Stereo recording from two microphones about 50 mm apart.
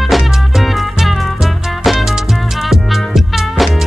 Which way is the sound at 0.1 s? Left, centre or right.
Centre.